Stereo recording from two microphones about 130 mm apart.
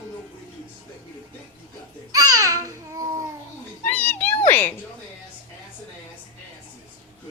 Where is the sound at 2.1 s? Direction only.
25° right (ahead or behind).